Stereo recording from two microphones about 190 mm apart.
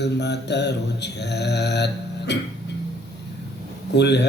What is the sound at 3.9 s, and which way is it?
Mantra, 65° left (ahead or behind).